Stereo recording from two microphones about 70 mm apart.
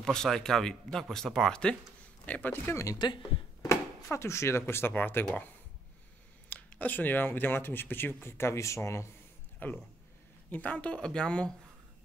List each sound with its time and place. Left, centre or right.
0.0 s speech: centre
2.5 s speech: left
3.0 s speech: left
3.6 s speech: left
6.5 s speech: left
9.6 s speech: left